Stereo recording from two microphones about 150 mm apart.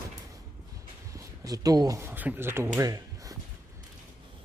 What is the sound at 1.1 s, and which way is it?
Speech, 25° right (ahead or behind).